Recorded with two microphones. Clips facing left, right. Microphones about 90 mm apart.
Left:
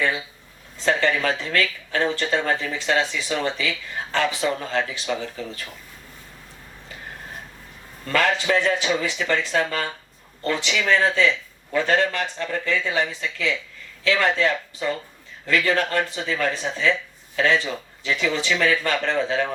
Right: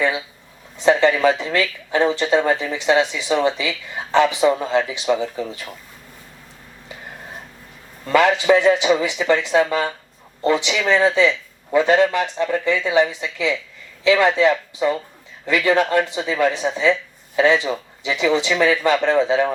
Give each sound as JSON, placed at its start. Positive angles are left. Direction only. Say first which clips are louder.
{"t": 0.8, "sound": "speech", "louder": "right 6 dB", "side_deg": -15}
{"t": 8.0, "sound": "speech", "louder": "right 6 dB", "side_deg": -15}